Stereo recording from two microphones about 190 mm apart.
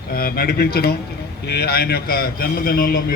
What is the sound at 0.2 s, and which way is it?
A man's voice, 55° left (ahead or behind).